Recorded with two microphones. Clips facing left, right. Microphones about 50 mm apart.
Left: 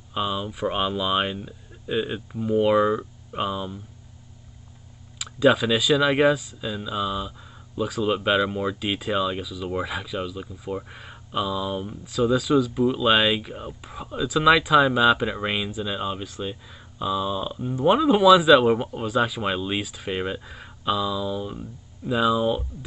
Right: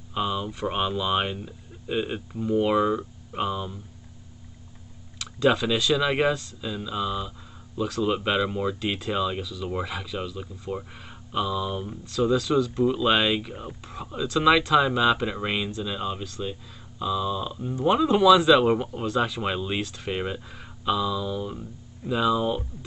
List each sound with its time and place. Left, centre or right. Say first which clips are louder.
0.2 s speech: left 1 dB; centre
5.2 s speech: left 3 dB; centre
17.9 s speech: left 1 dB; centre
20.4 s a sound: left 2 dB; centre
20.8 s speech: left 1 dB; centre